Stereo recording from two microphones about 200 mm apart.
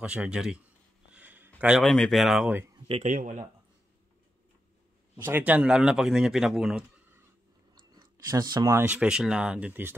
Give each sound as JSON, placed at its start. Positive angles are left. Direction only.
{"t": 0.0, "sound": "a man's voice", "side_deg": -5}
{"t": 1.1, "sound": "a sound", "side_deg": -10}
{"t": 1.6, "sound": "a man's voice", "side_deg": 0}
{"t": 2.9, "sound": "speech", "side_deg": -40}
{"t": 5.1, "sound": "a man's voice", "side_deg": -10}
{"t": 7.7, "sound": "speech", "side_deg": -20}